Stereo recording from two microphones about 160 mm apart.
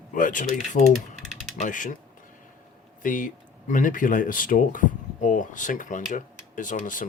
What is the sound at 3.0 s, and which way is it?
Speech, 55° left (ahead or behind).